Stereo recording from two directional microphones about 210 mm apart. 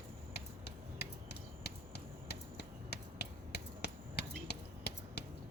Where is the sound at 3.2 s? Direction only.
50° left (ahead or behind).